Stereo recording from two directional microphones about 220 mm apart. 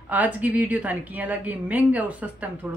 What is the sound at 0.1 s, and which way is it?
A woman's voice, 5° right (ahead or behind).